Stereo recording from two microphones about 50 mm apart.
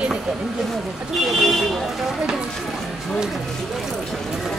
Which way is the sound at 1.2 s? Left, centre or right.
Centre.